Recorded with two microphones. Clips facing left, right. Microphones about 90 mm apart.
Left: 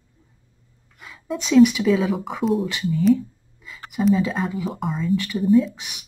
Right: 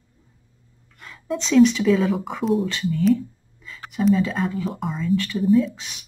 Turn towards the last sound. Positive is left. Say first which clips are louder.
# left 1 dB
turn(degrees=0)  # may be behind; listen again after turning